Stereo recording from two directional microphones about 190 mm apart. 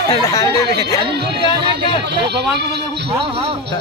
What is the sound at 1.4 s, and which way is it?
Speech, 25° left (ahead or behind).